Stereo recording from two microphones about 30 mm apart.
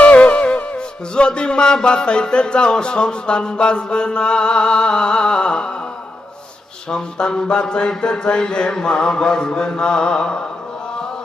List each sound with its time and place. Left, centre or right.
0.3 s music: left
1.1 s music: left
6.9 s music: left
7.5 s mantra: left